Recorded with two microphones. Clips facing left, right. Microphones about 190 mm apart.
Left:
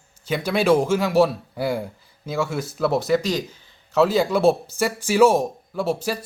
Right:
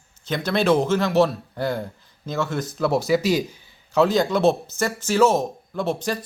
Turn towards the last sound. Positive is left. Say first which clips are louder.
# left 1 dB
turn(degrees=5)  # may be behind; listen again after turning